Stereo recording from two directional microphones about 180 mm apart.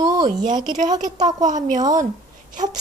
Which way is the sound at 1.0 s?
40° right (ahead or behind).